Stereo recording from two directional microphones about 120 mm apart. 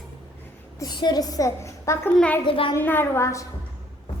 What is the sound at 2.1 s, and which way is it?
Speech, 10° left (ahead or behind).